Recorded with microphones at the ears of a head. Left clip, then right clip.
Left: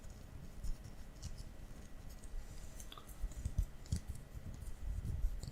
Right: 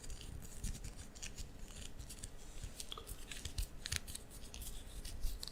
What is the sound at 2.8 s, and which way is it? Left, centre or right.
Scissors, right.